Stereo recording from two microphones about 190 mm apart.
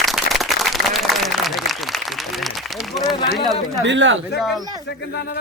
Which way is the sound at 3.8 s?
80° right.